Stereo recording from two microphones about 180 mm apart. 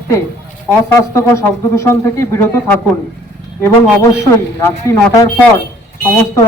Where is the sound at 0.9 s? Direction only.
15° left (ahead or behind).